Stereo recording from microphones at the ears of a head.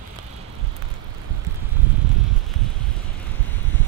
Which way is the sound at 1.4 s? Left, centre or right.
Right.